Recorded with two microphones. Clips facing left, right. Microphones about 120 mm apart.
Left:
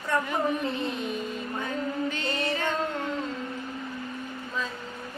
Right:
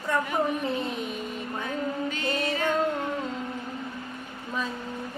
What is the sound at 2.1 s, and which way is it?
Music, 10° right (ahead or behind).